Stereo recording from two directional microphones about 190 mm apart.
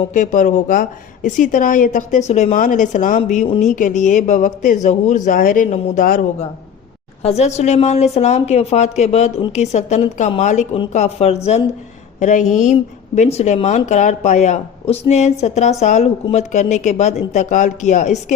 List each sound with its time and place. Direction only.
0.1 s speech: 40° left (ahead or behind)
7.2 s speech: 35° left (ahead or behind)